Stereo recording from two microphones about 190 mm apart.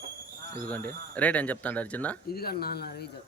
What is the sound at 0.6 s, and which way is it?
Speech, 10° left (ahead or behind).